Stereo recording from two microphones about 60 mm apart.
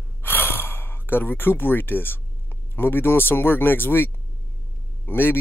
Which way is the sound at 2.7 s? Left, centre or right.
Left.